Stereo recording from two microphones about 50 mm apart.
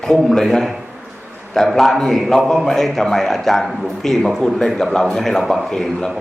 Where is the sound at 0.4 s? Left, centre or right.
Centre.